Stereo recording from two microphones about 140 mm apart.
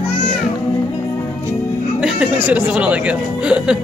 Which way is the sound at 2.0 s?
10° right (ahead or behind).